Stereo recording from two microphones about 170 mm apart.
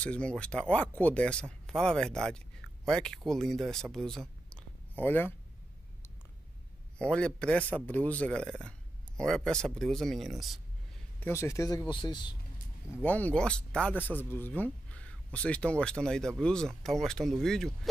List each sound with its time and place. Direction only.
0.0 s speech: 5° left (ahead or behind)
3.9 s a sound: centre (ahead or behind)
7.0 s speech: 5° left (ahead or behind)
11.1 s speech: 15° left (ahead or behind)
12.9 s speech: 10° left (ahead or behind)